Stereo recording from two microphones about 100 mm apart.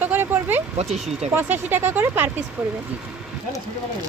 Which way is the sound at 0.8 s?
90° right.